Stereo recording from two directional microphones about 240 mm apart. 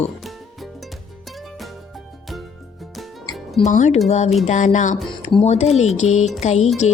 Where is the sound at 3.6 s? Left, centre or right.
Left.